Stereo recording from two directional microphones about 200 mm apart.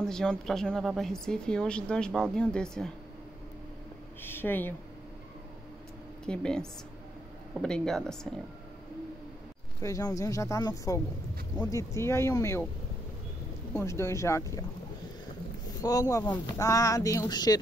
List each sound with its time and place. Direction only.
0.0 s speech: 5° left (ahead or behind)
4.2 s speech: 10° left (ahead or behind)
6.2 s speech: 5° left (ahead or behind)
9.8 s speech: 15° left (ahead or behind)
13.7 s speech: 15° left (ahead or behind)
15.8 s speech: 15° left (ahead or behind)